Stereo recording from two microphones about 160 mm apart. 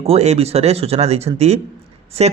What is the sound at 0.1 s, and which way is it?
Speech, 40° right (ahead or behind).